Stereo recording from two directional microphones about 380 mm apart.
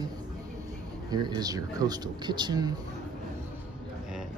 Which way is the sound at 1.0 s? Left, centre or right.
Centre.